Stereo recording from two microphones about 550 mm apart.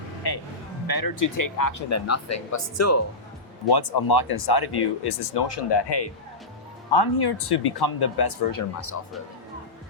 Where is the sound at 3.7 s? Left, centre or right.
Left.